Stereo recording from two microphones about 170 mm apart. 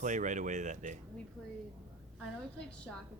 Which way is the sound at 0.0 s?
45° right (ahead or behind).